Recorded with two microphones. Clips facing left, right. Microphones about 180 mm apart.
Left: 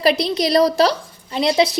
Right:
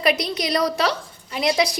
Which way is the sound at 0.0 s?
30° left (ahead or behind).